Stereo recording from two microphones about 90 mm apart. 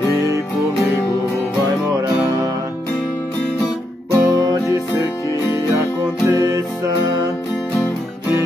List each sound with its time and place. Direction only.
4.1 s music: 40° right (ahead or behind)